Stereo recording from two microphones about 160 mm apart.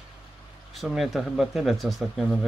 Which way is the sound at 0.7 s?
Centre (ahead or behind).